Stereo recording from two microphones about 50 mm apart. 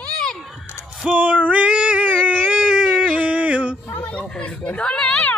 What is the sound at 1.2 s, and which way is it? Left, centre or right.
Female singing, right.